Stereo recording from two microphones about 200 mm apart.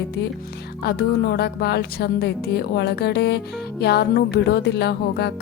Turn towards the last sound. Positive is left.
turn(degrees=55)  # may be behind; listen again after turning